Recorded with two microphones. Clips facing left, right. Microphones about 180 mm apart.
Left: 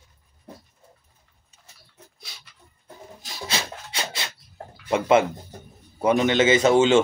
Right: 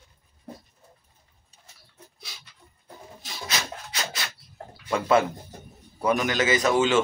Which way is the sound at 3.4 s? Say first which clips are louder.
Left 2 dB; 30° left (ahead or behind).